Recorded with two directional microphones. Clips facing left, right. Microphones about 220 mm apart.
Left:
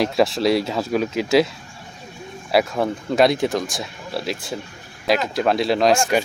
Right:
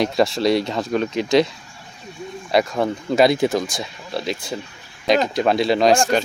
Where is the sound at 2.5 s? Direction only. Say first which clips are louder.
Even; 5° left (ahead or behind).